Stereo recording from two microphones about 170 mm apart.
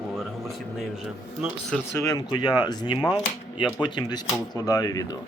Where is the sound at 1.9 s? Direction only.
20° left (ahead or behind).